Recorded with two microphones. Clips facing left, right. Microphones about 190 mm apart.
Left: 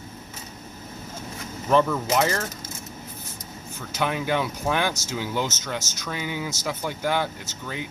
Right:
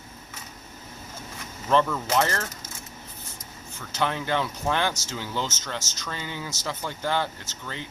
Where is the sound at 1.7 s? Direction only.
10° left (ahead or behind).